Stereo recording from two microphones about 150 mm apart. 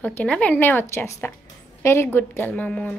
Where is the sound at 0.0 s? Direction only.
10° left (ahead or behind).